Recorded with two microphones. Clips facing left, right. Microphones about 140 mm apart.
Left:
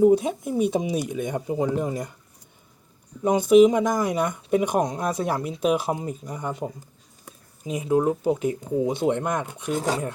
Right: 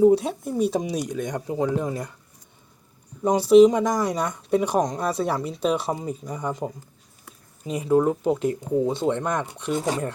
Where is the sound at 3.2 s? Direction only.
Centre (ahead or behind).